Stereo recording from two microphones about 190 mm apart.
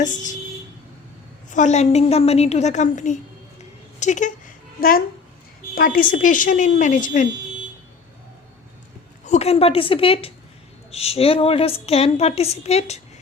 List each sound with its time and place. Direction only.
0.0 s a woman's voice: 40° left (ahead or behind)
1.5 s a woman's voice: 40° left (ahead or behind)
3.6 s a sound: 40° left (ahead or behind)
5.7 s a woman's voice: 45° left (ahead or behind)
9.2 s a woman's voice: 35° left (ahead or behind)